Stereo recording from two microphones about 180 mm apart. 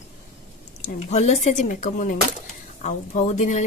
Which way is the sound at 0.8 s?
40° left (ahead or behind).